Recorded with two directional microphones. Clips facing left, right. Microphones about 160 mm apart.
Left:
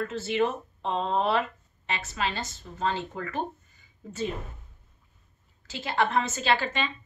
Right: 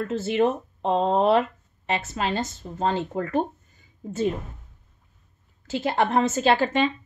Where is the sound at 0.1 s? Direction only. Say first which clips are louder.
Right 8 dB; 50° right (ahead or behind).